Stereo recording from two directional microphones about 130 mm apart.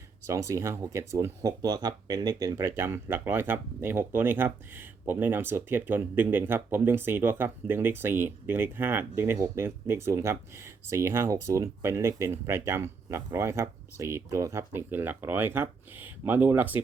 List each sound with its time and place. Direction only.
0.3 s speech: 25° right (ahead or behind)